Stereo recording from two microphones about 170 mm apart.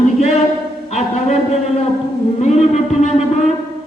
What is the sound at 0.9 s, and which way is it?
Music, 40° left (ahead or behind).